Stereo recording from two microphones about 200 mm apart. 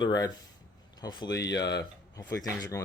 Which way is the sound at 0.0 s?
20° left (ahead or behind).